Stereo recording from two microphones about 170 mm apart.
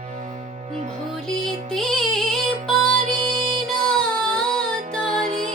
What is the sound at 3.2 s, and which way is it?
Music, 35° right (ahead or behind).